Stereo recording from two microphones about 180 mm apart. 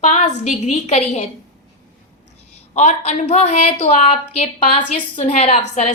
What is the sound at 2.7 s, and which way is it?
A woman's voice, 40° left (ahead or behind).